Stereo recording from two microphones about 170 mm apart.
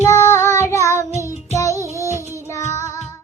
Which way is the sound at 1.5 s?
20° left (ahead or behind).